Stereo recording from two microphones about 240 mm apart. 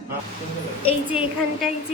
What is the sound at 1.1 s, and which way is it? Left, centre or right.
Speech, centre.